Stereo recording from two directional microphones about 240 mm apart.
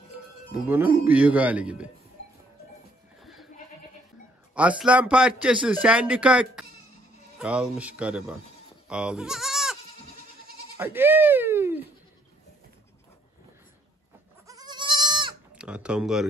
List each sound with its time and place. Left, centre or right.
0.5 s speech: centre
3.2 s goat: centre
4.6 s speech: centre
8.8 s goat: centre
10.8 s speech: centre
14.5 s goat: centre
15.5 s speech: centre